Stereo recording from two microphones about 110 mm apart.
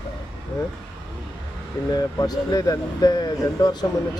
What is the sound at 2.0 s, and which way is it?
Speech, 35° left (ahead or behind).